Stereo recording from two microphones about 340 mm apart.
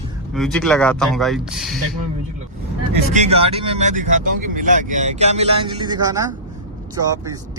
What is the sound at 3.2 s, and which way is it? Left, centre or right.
Speech, centre.